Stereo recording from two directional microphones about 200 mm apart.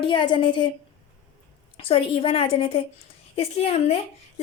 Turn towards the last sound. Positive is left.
turn(degrees=30)  # may be behind; listen again after turning